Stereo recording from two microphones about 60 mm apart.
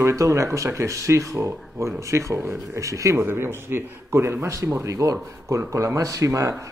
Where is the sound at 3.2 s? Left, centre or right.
Right.